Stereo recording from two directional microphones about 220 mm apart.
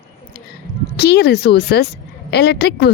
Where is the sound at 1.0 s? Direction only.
50° left (ahead or behind).